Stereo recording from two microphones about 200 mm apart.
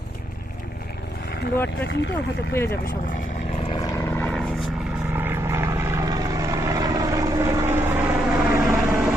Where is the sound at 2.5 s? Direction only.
10° left (ahead or behind).